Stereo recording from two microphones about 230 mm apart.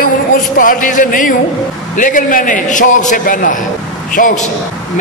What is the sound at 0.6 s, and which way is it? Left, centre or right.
A man's voice, left.